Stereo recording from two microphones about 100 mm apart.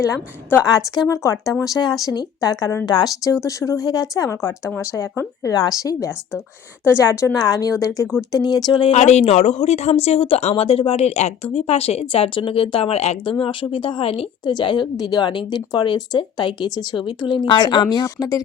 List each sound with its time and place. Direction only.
1.0 s speech: 30° left (ahead or behind)
8.9 s speech: 90° left
13.4 s speech: 60° left (ahead or behind)
14.4 s a woman's voice: 50° left (ahead or behind)
17.6 s speech: 45° left (ahead or behind)